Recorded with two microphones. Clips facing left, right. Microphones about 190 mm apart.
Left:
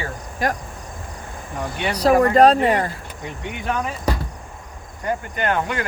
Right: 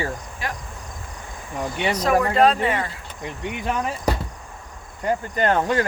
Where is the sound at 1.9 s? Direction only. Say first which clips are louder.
Left 5 dB; 35° left (ahead or behind).